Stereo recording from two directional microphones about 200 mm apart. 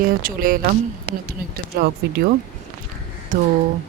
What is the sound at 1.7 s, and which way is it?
Speech, 55° right (ahead or behind).